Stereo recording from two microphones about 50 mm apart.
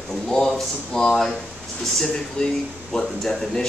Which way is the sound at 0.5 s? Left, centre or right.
Centre.